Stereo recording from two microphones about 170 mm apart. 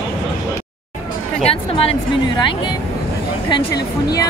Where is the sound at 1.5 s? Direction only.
30° left (ahead or behind).